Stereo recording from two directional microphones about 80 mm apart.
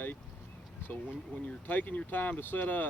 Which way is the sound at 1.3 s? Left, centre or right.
Centre.